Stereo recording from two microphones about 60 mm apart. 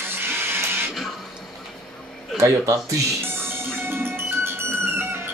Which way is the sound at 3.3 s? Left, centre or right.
Right.